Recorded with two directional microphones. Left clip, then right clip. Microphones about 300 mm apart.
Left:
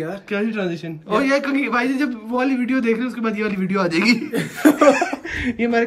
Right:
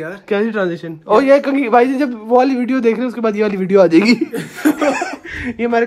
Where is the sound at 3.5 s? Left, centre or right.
Right.